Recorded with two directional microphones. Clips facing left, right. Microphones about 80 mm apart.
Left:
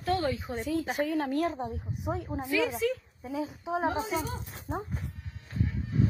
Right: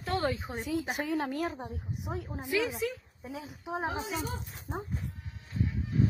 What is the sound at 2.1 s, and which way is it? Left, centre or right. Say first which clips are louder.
A woman's voice: left 1 dB; centre.